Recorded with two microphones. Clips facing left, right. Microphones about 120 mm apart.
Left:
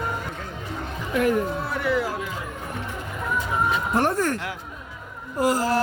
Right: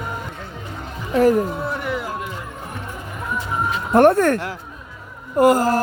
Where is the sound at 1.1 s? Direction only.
35° right (ahead or behind).